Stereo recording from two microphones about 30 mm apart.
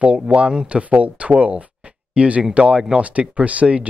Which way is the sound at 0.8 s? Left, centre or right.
Right.